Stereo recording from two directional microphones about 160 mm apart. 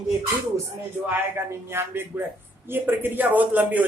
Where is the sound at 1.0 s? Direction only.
15° right (ahead or behind).